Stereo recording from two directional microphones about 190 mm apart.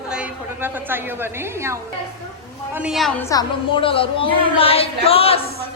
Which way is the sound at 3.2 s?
25° left (ahead or behind).